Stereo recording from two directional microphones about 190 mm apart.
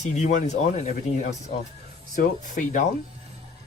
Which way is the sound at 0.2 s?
40° left (ahead or behind).